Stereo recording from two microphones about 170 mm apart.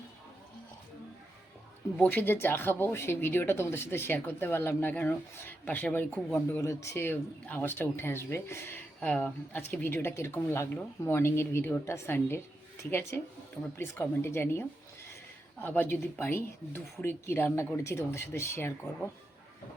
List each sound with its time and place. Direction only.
2.0 s speech: 10° left (ahead or behind)